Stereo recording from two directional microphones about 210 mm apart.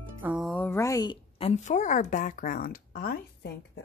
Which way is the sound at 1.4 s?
35° left (ahead or behind).